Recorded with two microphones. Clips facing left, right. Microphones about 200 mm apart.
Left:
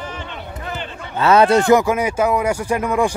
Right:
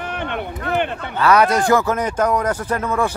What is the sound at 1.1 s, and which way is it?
Speech, 25° left (ahead or behind).